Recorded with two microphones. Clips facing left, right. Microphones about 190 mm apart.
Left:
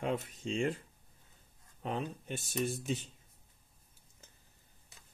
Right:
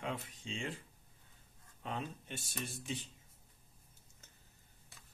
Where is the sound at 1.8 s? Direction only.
45° left (ahead or behind).